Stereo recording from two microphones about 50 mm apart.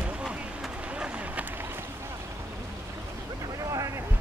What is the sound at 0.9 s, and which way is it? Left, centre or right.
Run, right.